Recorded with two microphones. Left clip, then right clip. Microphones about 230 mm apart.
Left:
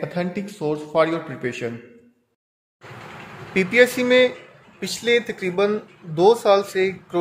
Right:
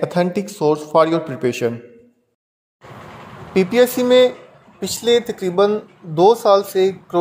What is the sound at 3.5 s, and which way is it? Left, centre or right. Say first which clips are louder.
Speech: right 2 dB; centre.